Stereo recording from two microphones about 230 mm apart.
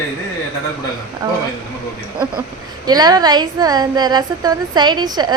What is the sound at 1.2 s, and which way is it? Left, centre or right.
Speech, centre.